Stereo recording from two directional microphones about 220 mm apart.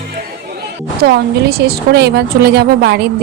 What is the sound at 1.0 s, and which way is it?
A woman's voice, 45° right (ahead or behind).